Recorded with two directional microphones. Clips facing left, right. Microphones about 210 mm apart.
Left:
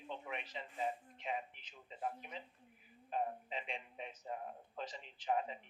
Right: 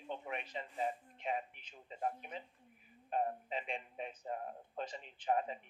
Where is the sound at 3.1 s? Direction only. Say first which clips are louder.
Right 3 dB; 45° right (ahead or behind).